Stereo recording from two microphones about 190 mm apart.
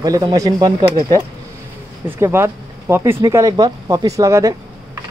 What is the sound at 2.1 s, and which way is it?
Speech, 10° right (ahead or behind).